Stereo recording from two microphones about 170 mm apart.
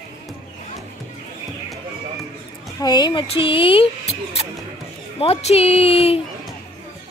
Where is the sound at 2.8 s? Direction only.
25° left (ahead or behind).